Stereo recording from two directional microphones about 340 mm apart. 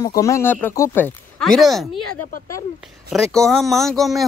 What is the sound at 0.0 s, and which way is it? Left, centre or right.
Speech, centre.